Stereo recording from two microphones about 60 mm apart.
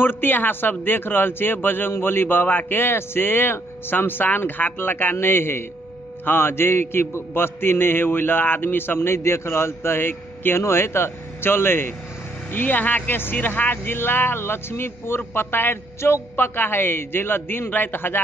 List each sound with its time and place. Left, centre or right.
0.0 s a man's voice: left